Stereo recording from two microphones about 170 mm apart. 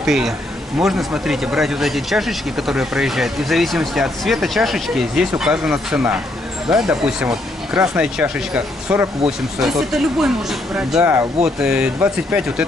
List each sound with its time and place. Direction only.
0.0 s speech: centre (ahead or behind)
11.0 s speech: 15° right (ahead or behind)
11.4 s speech: 5° right (ahead or behind)